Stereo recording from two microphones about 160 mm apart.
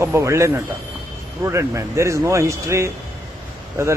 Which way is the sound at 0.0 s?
15° right (ahead or behind).